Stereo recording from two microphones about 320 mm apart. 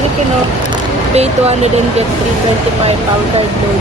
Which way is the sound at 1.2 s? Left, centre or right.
Centre.